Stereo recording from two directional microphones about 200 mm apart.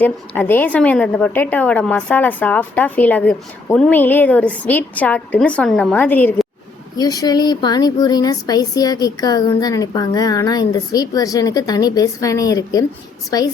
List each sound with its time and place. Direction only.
0.0 s a woman's voice: 10° left (ahead or behind)